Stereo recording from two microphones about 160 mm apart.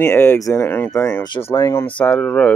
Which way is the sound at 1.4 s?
15° left (ahead or behind).